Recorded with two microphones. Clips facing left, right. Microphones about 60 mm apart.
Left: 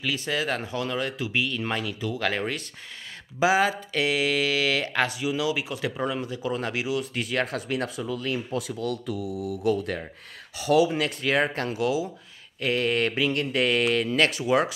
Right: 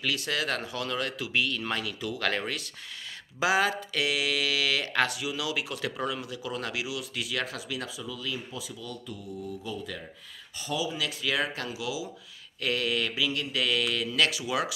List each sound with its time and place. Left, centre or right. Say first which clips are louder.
0.1 s speech: left 4 dB; left
10.6 s speech: left 11 dB; left
10.9 s speech: left 5 dB; left
12.5 s speech: left 4 dB; left